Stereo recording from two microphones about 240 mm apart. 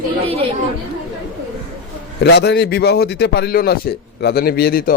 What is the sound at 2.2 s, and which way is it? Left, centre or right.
A man's voice, left.